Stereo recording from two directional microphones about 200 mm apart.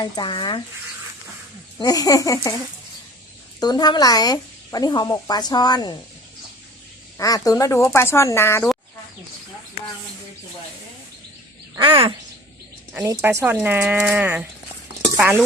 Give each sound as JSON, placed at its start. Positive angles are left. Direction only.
{"t": 0.0, "sound": "speech", "side_deg": 25}
{"t": 1.8, "sound": "speech", "side_deg": 20}
{"t": 3.6, "sound": "speech", "side_deg": 20}
{"t": 7.2, "sound": "speech", "side_deg": 20}
{"t": 11.7, "sound": "speech", "side_deg": -25}
{"t": 12.9, "sound": "speech", "side_deg": -10}
{"t": 15.1, "sound": "stir", "side_deg": -10}